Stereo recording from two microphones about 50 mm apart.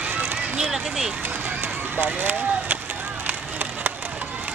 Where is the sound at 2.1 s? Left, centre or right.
Right.